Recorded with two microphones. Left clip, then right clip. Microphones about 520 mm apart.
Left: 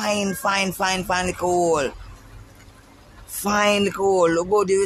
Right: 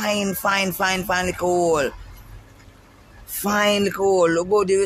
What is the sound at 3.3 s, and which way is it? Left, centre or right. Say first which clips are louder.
A man's voice: even; right.